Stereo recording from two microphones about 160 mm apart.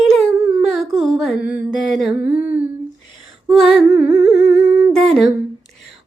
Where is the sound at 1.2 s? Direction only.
5° right (ahead or behind).